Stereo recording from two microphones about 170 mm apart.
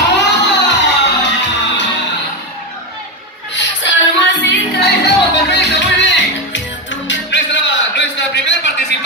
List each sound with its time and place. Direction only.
0.1 s music: 90° left
3.5 s music: 90° left